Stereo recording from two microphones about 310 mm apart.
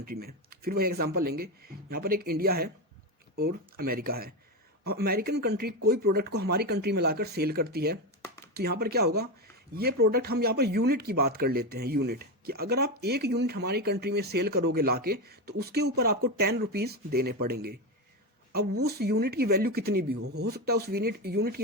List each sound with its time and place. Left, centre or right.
0.0 s speech: right
18.9 s speech: right